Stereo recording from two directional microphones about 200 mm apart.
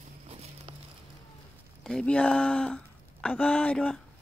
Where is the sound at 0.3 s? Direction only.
30° right (ahead or behind).